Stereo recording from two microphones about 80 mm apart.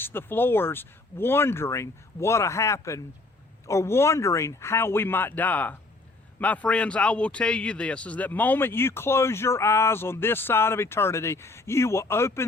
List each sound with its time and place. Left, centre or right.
0.0 s a man's voice: left